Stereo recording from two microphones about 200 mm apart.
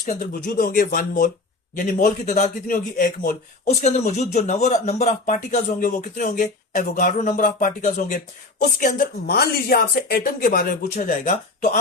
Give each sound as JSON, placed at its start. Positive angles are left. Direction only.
{"t": 0.1, "sound": "a man's voice", "side_deg": 45}